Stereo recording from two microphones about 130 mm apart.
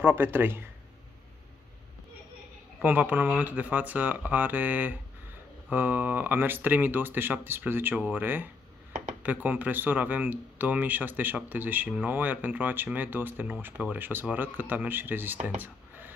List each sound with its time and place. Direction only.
0.0 s speech: 15° right (ahead or behind)
2.8 s speech: 15° right (ahead or behind)